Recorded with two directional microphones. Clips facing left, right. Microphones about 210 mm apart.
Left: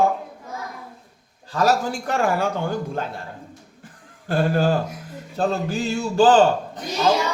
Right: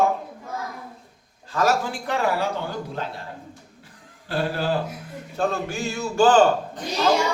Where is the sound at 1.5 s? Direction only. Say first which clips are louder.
Left 2 dB; 35° left (ahead or behind).